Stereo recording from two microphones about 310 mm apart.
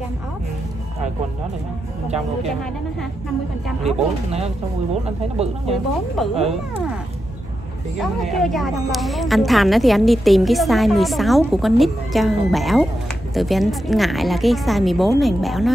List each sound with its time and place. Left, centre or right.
3.8 s speech: centre
8.0 s a woman's voice: centre